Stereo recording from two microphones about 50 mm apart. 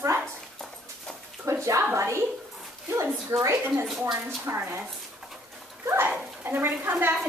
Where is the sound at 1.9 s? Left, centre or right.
Right.